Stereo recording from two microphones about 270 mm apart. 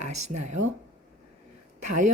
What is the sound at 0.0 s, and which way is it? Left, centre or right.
Speech, right.